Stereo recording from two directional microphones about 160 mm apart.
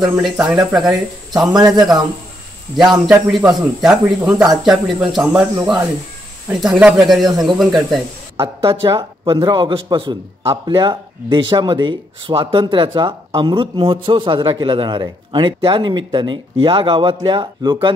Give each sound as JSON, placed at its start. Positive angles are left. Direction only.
{"t": 0.0, "sound": "speech", "side_deg": -5}
{"t": 2.8, "sound": "speech", "side_deg": 0}
{"t": 6.5, "sound": "speech", "side_deg": -5}
{"t": 8.4, "sound": "a man's voice", "side_deg": -35}